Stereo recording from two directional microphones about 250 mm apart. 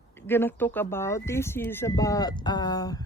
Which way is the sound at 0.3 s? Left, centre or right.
Centre.